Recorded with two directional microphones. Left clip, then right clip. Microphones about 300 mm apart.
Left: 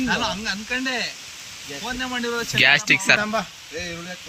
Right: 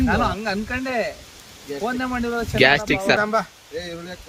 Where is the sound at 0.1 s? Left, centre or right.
Centre.